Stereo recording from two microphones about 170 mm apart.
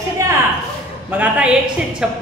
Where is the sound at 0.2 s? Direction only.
20° right (ahead or behind).